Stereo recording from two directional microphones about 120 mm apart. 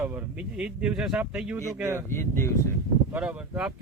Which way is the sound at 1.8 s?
20° right (ahead or behind).